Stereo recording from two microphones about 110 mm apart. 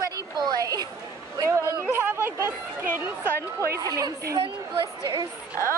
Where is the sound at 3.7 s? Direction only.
30° right (ahead or behind).